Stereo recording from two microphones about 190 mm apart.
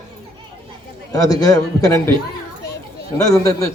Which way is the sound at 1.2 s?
20° left (ahead or behind).